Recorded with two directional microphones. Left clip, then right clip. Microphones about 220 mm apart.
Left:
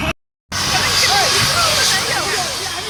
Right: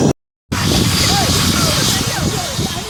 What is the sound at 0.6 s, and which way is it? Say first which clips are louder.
Vehicle: left 1 dB; 40° right (ahead or behind).